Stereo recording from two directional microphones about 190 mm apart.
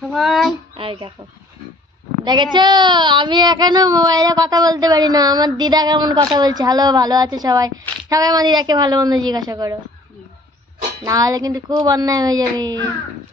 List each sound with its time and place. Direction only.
0.1 s speech: centre (ahead or behind)
0.7 s speech: 25° right (ahead or behind)
2.2 s speech: 25° right (ahead or behind)
11.1 s speech: 20° right (ahead or behind)